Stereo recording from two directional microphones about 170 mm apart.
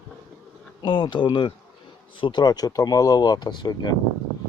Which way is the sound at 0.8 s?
25° left (ahead or behind).